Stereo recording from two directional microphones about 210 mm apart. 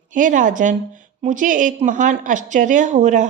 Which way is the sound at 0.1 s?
40° right (ahead or behind).